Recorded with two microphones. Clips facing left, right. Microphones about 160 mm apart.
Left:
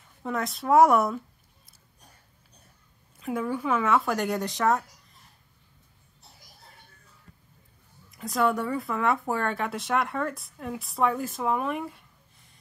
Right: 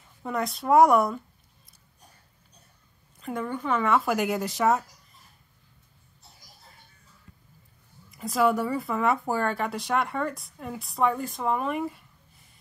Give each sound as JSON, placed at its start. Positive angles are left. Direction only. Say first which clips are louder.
{"t": 0.2, "sound": "speech", "louder": "right 1 dB", "side_deg": 0}
{"t": 3.2, "sound": "speech", "louder": "left 2 dB", "side_deg": 5}
{"t": 8.1, "sound": "speech", "louder": "right 2 dB", "side_deg": 0}